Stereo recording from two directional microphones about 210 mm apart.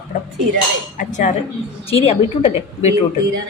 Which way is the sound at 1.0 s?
35° left (ahead or behind).